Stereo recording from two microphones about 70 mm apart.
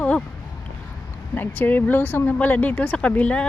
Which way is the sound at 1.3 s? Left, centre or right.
Left.